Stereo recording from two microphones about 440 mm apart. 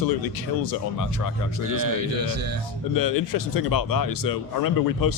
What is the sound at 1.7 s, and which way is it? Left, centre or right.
Speech, right.